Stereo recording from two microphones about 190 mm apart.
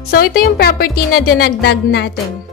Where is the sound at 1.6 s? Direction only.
65° left (ahead or behind).